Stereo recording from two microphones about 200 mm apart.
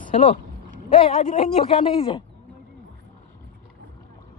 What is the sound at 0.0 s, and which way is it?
Speech, 35° left (ahead or behind).